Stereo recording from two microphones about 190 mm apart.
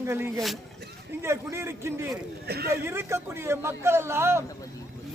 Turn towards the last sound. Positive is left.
turn(degrees=-15)  # may be behind; listen again after turning